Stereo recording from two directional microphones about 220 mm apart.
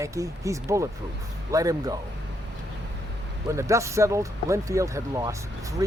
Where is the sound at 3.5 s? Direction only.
15° right (ahead or behind).